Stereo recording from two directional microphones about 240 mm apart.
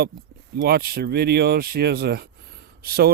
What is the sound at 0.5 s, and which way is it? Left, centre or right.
Speech, right.